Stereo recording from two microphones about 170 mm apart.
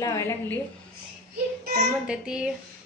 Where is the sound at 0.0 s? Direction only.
15° left (ahead or behind).